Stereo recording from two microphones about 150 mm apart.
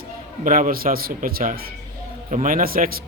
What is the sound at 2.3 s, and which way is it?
Speech, 60° right (ahead or behind).